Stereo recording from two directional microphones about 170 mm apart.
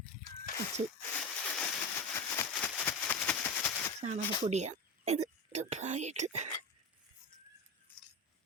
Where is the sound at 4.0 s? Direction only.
40° right (ahead or behind).